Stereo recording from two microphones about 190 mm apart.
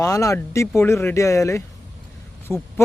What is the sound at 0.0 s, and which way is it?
A man's voice, 15° left (ahead or behind).